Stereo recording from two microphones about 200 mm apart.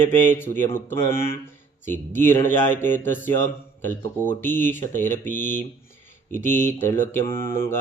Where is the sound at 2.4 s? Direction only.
10° left (ahead or behind).